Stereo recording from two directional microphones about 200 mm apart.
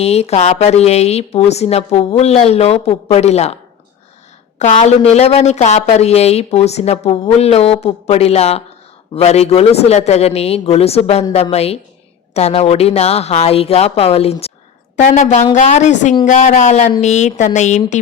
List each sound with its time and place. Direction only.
0.0 s speech: 30° left (ahead or behind)
4.6 s speech: 35° left (ahead or behind)